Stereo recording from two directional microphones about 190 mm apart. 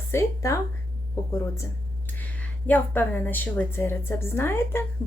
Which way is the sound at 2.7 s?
10° left (ahead or behind).